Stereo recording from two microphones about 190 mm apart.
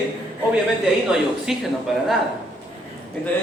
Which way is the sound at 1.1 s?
Centre (ahead or behind).